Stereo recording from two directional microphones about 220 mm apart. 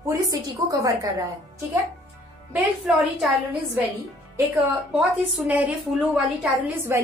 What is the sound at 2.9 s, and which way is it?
Speech, 5° right (ahead or behind).